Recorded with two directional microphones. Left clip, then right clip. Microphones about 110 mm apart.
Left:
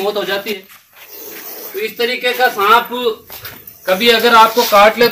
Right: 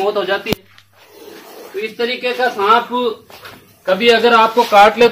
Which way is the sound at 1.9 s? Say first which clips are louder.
Left 3 dB; 5° left (ahead or behind).